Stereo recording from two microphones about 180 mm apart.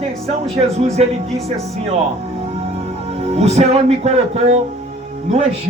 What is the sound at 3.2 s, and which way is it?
Speech, 35° right (ahead or behind).